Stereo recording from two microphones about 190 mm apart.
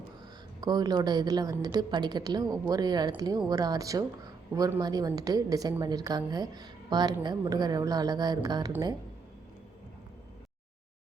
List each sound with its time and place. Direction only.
0.6 s a woman's voice: 20° right (ahead or behind)